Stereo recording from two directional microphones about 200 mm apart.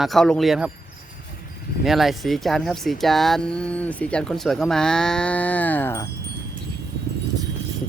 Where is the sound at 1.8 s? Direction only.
Centre (ahead or behind).